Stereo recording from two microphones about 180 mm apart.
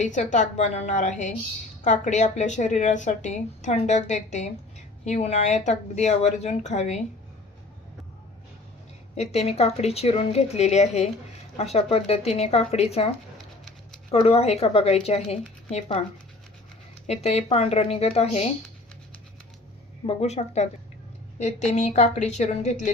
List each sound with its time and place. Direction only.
0.0 s a woman's voice: 45° left (ahead or behind)
9.1 s a woman's voice: 35° left (ahead or behind)
17.1 s a woman's voice: 35° left (ahead or behind)
20.1 s a woman's voice: 35° left (ahead or behind)